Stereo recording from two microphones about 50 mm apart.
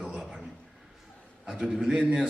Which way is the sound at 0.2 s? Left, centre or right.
Centre.